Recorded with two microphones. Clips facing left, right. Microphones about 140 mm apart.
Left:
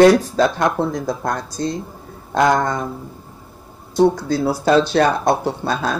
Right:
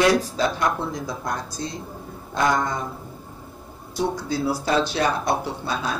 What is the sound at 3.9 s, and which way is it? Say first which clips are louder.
Speech: left 9 dB; 65° left (ahead or behind).